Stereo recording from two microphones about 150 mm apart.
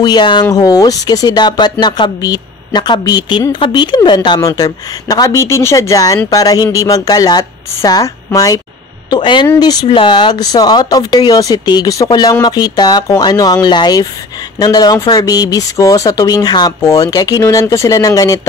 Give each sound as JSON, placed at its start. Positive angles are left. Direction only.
{"t": 0.0, "sound": "speech", "side_deg": 30}